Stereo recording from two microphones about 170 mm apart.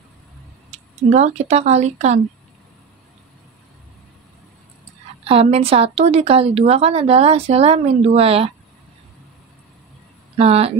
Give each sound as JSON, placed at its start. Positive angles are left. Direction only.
{"t": 0.7, "sound": "speech", "side_deg": -40}
{"t": 5.2, "sound": "a woman's voice", "side_deg": -35}
{"t": 10.3, "sound": "a woman's voice", "side_deg": -35}